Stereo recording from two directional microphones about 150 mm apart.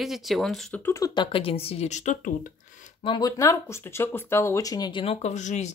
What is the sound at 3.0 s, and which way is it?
Speech, 25° left (ahead or behind).